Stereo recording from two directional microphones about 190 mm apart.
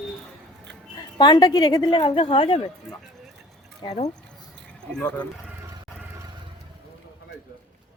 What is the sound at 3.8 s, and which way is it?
Speech, 35° left (ahead or behind).